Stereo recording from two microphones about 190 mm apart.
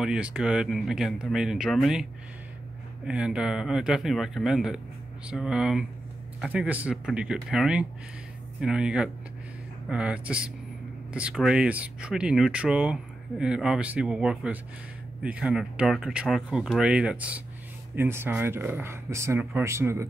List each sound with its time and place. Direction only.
0.0 s speech: 5° right (ahead or behind)
3.1 s speech: 5° right (ahead or behind)